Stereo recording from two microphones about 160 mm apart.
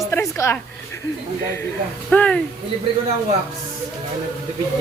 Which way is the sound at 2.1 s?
10° left (ahead or behind).